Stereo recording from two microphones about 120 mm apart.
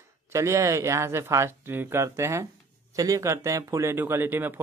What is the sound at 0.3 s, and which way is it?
Speech, 25° right (ahead or behind).